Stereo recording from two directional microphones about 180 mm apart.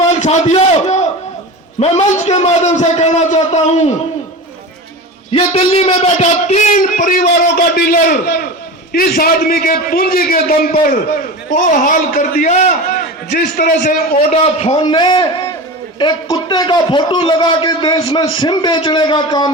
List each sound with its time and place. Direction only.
0.1 s a man's voice: 40° left (ahead or behind)
5.3 s a man's voice: 35° left (ahead or behind); by 14.0 s 50° left (ahead or behind)
14.3 s a man's voice: 35° left (ahead or behind)